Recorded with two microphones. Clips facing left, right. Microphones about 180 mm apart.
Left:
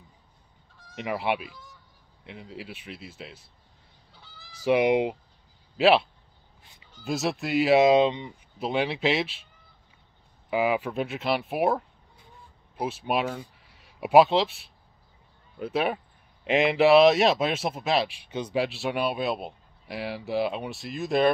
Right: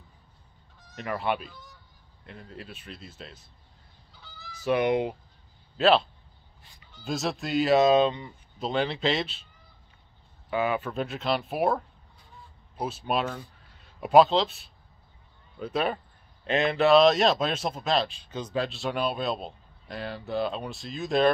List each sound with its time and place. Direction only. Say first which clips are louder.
2.2 s speech: left 3 dB; 80° left
3.1 s speech: left 2 dB; 10° left (ahead or behind)
4.7 s speech: left 3 dB; 90° left
5.8 s speech: left 1 dB; 10° left (ahead or behind)
7.1 s speech: left 2 dB; 5° left (ahead or behind)
10.5 s speech: left 2 dB; 15° left (ahead or behind)
13.6 s a sound: even; 90° left
13.9 s speech: left 1 dB; 10° left (ahead or behind)
15.6 s speech: left 1 dB; 10° left (ahead or behind)